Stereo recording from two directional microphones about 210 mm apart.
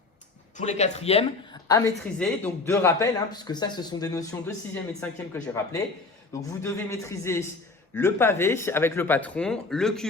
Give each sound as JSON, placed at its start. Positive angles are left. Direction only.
{"t": 0.5, "sound": "speech", "side_deg": 35}
{"t": 1.6, "sound": "a woman's voice", "side_deg": 15}
{"t": 2.1, "sound": "a man's voice", "side_deg": 5}